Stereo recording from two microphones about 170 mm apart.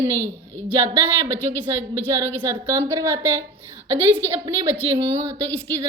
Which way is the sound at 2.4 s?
15° right (ahead or behind).